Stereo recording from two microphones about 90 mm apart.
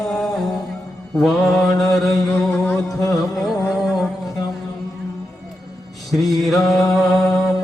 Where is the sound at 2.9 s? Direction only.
40° left (ahead or behind).